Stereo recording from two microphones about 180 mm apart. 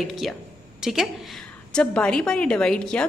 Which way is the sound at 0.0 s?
Centre (ahead or behind).